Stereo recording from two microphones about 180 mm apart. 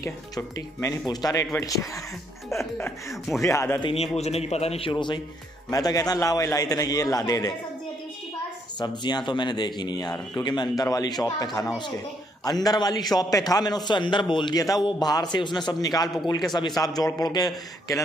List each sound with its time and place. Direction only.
0.0 s speech: 15° left (ahead or behind)
3.1 s speech: centre (ahead or behind)
3.4 s speech: 15° left (ahead or behind)
3.8 s a man's voice: 35° left (ahead or behind); by 7.5 s 20° left (ahead or behind)
8.7 s a man's voice: 25° left (ahead or behind)
12.4 s a man's voice: 20° left (ahead or behind)